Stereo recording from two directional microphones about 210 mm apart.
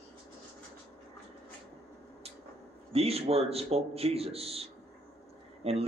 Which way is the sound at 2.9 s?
30° right (ahead or behind).